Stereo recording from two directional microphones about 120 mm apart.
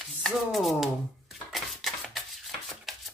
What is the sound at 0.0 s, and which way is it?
Speech, centre (ahead or behind).